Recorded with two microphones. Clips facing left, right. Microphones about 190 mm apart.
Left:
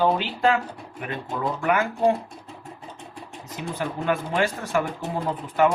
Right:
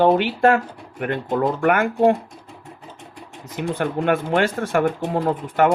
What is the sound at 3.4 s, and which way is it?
Speech, 55° right (ahead or behind).